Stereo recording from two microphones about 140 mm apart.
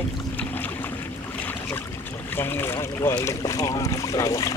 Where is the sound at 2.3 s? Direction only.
15° left (ahead or behind).